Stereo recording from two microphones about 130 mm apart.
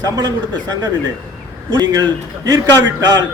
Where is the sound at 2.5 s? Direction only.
30° right (ahead or behind).